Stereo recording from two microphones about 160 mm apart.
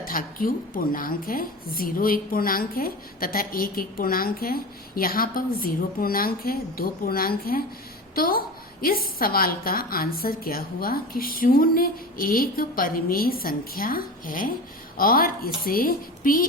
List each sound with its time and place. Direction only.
0.0 s a woman's voice: 60° left (ahead or behind)